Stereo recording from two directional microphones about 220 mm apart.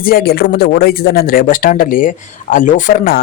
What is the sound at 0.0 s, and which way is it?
Speech, 45° left (ahead or behind).